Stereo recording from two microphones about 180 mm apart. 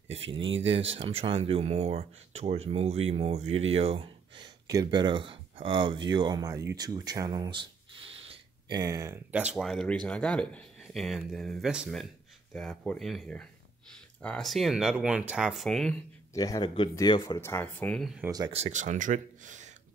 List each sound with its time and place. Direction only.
0.7 s speech: 30° right (ahead or behind); by 16.0 s centre (ahead or behind)
16.3 s speech: 20° left (ahead or behind)
17.4 s speech: 10° left (ahead or behind)
18.2 s speech: 20° right (ahead or behind)
18.5 s speech: 40° right (ahead or behind)